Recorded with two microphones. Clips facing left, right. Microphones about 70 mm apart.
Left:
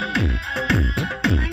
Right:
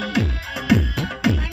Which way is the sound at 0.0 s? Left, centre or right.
Left.